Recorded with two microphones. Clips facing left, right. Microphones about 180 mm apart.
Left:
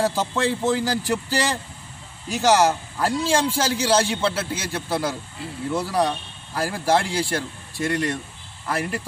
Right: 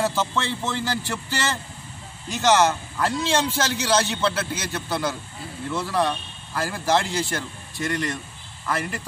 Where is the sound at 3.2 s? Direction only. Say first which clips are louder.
Left 3 dB; 35° left (ahead or behind).